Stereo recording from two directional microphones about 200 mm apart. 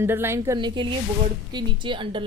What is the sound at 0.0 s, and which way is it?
A woman's voice, 10° right (ahead or behind).